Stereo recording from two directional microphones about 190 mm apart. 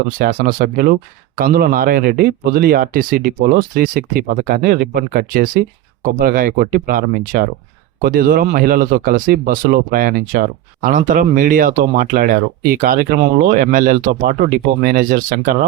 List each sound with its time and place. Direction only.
0.2 s speech: 50° right (ahead or behind)